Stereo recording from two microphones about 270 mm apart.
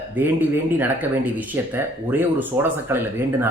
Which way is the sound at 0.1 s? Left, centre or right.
Centre.